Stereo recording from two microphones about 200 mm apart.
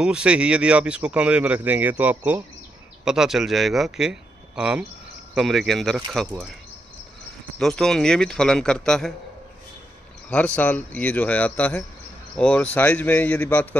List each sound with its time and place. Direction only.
0.0 s a man's voice: 5° right (ahead or behind)
7.5 s a man's voice: 5° left (ahead or behind)
10.3 s a man's voice: 5° left (ahead or behind)